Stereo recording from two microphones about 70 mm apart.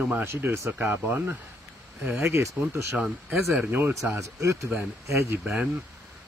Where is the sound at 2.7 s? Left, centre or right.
Right.